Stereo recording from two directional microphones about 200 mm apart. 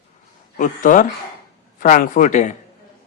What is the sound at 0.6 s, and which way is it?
Speech, 40° left (ahead or behind).